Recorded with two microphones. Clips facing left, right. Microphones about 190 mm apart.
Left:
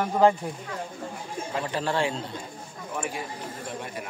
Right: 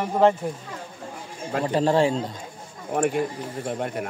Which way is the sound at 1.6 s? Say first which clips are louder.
Right 8 dB; 30° right (ahead or behind).